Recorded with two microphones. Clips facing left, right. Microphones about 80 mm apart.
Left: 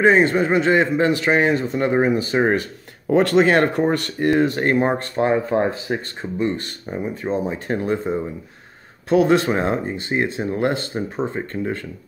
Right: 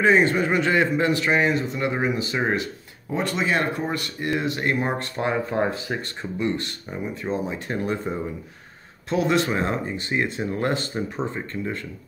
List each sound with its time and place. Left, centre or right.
0.0 s a man's voice: left
3.1 s speech: left
3.9 s speech: left
4.3 s a man's voice: left
4.8 s a man's voice: left
9.3 s a man's voice: left